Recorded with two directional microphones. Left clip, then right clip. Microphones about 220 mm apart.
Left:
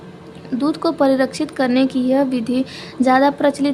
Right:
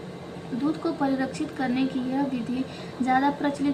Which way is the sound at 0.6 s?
55° left (ahead or behind).